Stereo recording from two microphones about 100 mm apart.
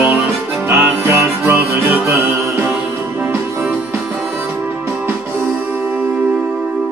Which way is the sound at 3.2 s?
20° right (ahead or behind).